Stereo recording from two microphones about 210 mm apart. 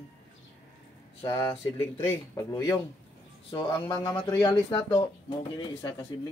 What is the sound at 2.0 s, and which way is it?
Speech, 15° left (ahead or behind).